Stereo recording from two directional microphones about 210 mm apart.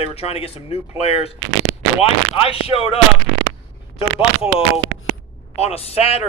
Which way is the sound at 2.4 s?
25° left (ahead or behind).